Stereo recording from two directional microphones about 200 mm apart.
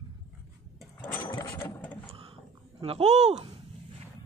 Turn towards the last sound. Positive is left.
turn(degrees=-35)  # may be behind; listen again after turning